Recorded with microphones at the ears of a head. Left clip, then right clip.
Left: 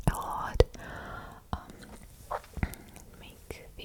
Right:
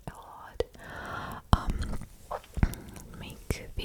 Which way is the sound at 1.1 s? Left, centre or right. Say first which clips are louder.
Right 10 dB; right.